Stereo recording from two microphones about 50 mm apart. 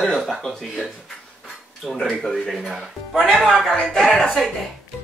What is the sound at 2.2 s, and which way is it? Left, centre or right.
Speech, centre.